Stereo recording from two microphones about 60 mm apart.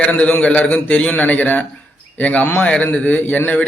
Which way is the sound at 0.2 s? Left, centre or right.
Left.